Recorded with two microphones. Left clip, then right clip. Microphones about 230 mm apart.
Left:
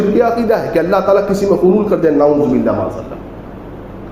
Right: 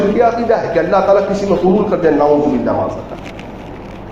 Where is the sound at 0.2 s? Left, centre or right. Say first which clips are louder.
Even; left.